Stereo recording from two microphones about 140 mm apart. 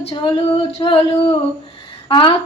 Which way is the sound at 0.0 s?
40° left (ahead or behind).